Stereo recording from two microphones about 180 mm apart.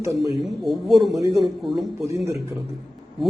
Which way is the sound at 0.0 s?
15° right (ahead or behind).